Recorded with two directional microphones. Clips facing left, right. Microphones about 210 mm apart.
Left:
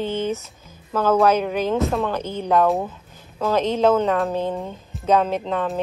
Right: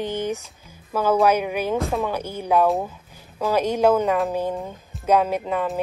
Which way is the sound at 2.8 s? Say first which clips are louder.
Left 1 dB; 10° right (ahead or behind).